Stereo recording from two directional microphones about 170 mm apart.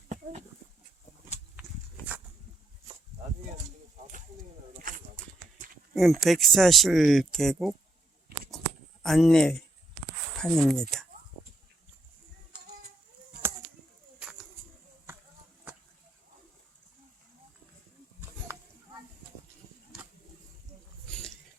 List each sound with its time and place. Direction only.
4.9 s a sound: 50° right (ahead or behind)
5.9 s speech: centre (ahead or behind)
9.0 s speech: centre (ahead or behind)